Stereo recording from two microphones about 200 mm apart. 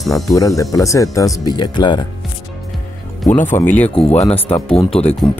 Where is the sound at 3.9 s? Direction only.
30° left (ahead or behind).